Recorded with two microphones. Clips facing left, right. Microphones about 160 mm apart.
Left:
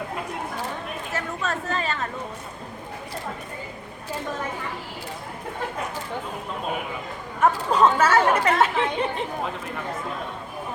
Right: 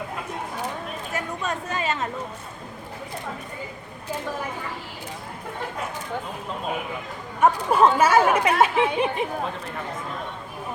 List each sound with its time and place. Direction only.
1.1 s speech: 20° right (ahead or behind)
7.4 s speech: 10° right (ahead or behind)